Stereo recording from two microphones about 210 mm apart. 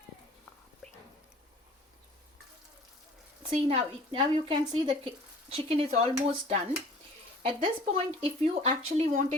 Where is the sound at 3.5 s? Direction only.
30° right (ahead or behind).